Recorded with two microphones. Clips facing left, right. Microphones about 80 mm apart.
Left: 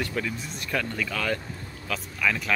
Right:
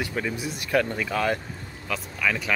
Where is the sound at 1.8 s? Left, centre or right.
Centre.